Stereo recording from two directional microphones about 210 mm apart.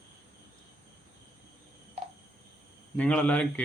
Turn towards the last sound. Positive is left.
turn(degrees=5)  # may be behind; listen again after turning